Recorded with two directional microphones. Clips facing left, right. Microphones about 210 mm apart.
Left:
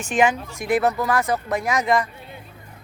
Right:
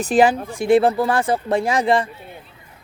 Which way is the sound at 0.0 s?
35° right (ahead or behind).